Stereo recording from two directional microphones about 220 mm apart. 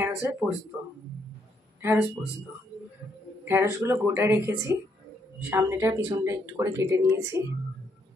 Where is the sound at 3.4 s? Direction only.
10° right (ahead or behind).